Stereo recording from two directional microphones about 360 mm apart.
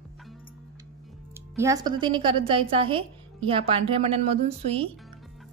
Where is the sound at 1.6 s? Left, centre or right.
Centre.